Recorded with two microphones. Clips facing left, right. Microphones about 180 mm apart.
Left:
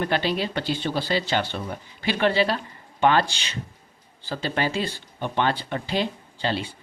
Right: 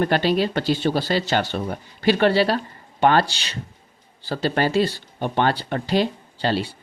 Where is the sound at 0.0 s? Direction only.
45° right (ahead or behind).